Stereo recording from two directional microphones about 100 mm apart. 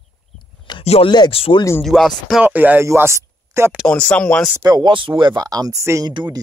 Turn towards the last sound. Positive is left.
turn(degrees=-50)  # may be behind; listen again after turning